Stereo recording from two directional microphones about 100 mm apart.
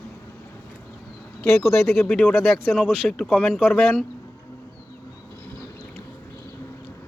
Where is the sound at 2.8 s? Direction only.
5° left (ahead or behind).